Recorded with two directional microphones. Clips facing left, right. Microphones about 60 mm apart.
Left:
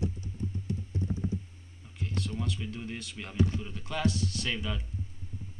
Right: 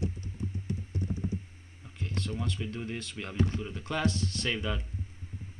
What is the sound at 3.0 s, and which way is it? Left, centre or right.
Speech, centre.